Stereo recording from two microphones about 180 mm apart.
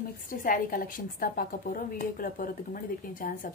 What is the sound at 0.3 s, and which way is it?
A woman's voice, 50° left (ahead or behind).